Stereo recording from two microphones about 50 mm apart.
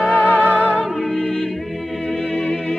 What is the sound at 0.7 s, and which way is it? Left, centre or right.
Music, centre.